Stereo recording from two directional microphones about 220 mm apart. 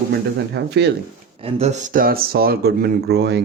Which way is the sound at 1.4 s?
30° right (ahead or behind).